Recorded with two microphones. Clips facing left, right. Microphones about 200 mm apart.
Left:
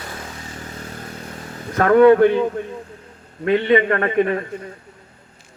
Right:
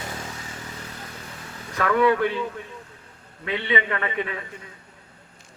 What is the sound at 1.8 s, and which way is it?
Speech, 50° left (ahead or behind).